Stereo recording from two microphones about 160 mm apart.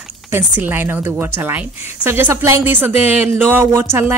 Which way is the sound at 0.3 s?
15° right (ahead or behind).